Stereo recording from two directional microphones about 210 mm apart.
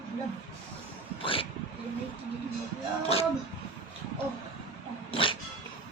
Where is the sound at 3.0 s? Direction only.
30° left (ahead or behind).